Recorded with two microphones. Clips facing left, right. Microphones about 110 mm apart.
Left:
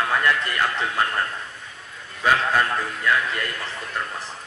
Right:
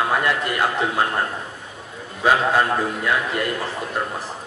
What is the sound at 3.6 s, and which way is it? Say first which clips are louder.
Speech: right 5 dB; 30° right (ahead or behind).